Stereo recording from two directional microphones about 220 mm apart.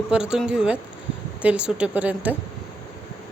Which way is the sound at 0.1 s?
5° right (ahead or behind).